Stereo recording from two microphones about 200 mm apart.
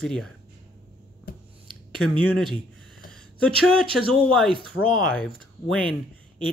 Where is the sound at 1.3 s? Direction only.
50° left (ahead or behind).